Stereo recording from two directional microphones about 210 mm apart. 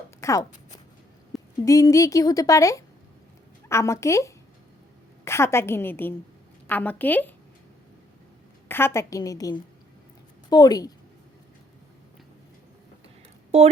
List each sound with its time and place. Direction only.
0.2 s a woman's voice: 15° left (ahead or behind)
8.6 s a woman's voice: 10° left (ahead or behind)